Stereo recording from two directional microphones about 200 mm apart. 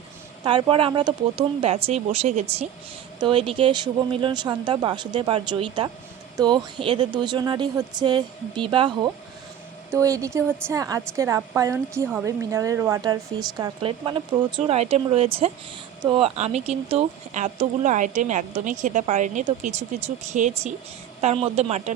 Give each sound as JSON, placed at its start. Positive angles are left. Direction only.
{"t": 0.4, "sound": "a woman's voice", "side_deg": -25}